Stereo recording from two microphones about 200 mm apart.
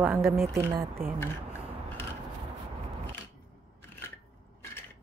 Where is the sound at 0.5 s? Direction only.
15° right (ahead or behind).